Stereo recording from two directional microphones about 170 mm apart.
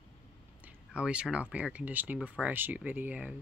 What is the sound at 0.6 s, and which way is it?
Speech, 10° right (ahead or behind).